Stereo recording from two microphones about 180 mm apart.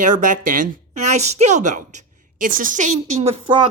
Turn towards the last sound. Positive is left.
turn(degrees=-30)  # may be behind; listen again after turning